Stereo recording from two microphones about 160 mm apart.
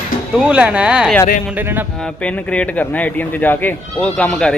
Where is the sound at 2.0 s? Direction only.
5° left (ahead or behind).